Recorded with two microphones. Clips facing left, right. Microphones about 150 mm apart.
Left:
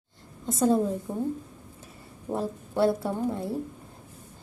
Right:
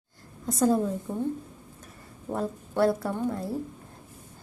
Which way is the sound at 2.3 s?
25° left (ahead or behind).